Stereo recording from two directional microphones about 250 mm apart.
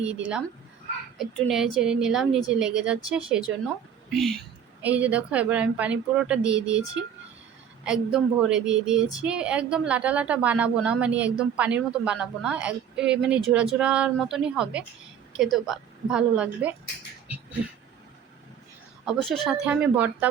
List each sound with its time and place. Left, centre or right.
0.0 s a woman's voice: centre
7.9 s a woman's voice: centre
19.2 s a woman's voice: centre